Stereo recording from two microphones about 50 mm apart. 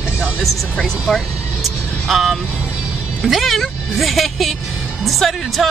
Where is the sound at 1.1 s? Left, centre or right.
Centre.